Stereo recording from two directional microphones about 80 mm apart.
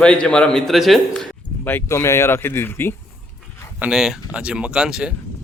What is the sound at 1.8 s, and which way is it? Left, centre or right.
Speech, left.